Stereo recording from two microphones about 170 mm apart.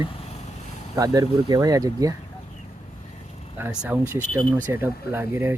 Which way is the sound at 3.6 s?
10° right (ahead or behind).